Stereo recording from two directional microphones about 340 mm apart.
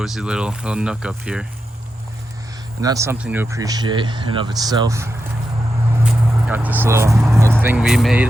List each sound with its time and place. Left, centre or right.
0.0 s speech: centre
2.8 s speech: centre
6.1 s speech: centre